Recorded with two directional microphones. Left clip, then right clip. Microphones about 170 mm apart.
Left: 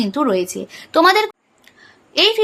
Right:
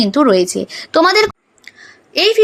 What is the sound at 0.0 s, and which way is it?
A woman's voice, 25° right (ahead or behind).